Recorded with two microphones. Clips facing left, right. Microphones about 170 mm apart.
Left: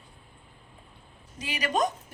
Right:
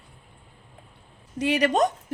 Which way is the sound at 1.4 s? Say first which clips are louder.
Right 7 dB; 70° right (ahead or behind).